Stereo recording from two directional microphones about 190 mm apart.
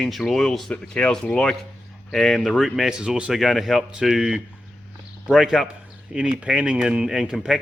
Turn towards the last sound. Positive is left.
turn(degrees=0)  # may be behind; listen again after turning